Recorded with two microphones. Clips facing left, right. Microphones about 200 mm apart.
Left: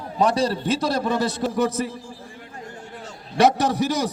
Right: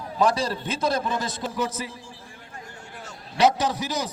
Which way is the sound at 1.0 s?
65° left (ahead or behind).